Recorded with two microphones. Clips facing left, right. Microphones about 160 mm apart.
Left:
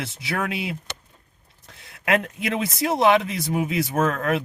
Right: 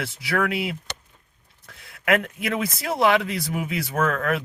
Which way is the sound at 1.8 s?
25° left (ahead or behind).